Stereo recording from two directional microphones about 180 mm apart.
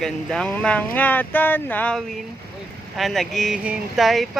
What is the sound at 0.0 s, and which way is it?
Speech, 5° left (ahead or behind).